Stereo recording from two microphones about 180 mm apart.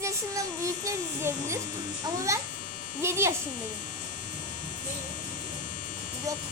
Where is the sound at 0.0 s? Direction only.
15° right (ahead or behind).